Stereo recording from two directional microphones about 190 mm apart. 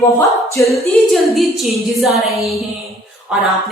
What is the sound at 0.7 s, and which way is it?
A woman's voice, centre (ahead or behind).